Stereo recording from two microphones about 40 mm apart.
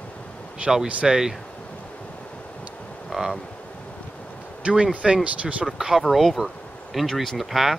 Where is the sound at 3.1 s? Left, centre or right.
Centre.